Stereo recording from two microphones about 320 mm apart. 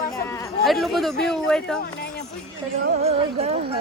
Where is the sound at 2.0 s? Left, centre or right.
Left.